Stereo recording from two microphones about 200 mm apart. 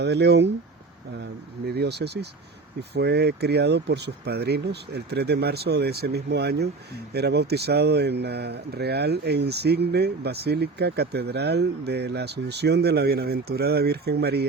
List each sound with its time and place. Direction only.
0.0 s speech: 55° right (ahead or behind)
1.6 s speech: 55° right (ahead or behind)